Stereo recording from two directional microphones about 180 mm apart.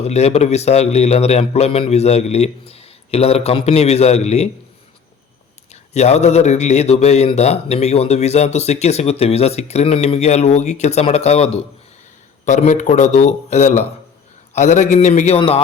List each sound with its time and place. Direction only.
0.0 s a man's voice: 35° left (ahead or behind)
5.9 s a man's voice: 35° left (ahead or behind)